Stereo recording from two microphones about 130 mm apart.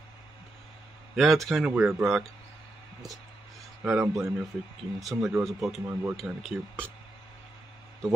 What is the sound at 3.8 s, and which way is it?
Speech, 20° right (ahead or behind).